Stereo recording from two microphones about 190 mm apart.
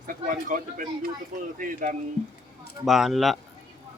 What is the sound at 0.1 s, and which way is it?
Speech, 45° right (ahead or behind).